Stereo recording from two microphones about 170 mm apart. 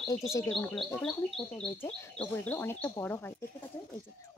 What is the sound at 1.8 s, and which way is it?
Speech, 10° left (ahead or behind).